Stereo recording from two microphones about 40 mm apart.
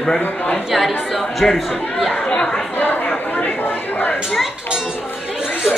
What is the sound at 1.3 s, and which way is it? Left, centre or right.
Speech, centre.